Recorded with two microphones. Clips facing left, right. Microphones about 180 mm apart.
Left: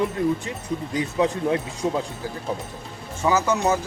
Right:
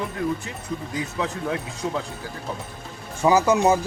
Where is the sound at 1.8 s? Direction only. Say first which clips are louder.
Left 2 dB; 25° left (ahead or behind).